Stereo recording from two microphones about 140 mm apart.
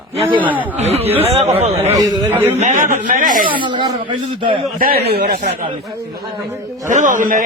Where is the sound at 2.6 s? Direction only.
65° right (ahead or behind).